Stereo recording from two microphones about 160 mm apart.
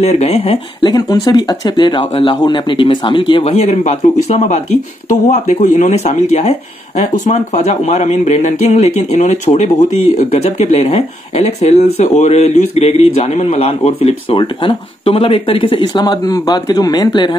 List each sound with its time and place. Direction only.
0.0 s speech: 40° left (ahead or behind)
0.8 s speech: 25° left (ahead or behind)